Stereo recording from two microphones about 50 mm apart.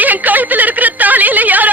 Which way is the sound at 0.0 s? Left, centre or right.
Right.